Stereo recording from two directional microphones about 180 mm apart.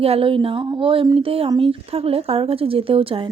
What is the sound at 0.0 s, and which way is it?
Speech, 30° right (ahead or behind).